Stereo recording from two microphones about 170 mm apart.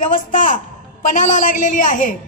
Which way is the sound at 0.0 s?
50° left (ahead or behind).